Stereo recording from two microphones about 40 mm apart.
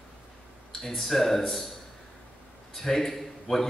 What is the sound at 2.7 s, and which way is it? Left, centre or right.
Speech, centre.